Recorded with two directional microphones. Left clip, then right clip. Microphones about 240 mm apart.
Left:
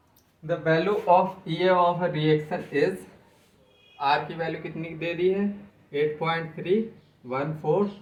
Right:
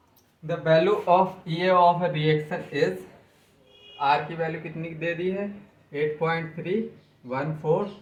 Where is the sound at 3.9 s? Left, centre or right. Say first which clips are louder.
Right 1 dB; centre.